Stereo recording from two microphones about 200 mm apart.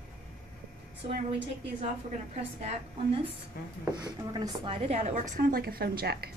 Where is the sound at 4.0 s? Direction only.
20° right (ahead or behind).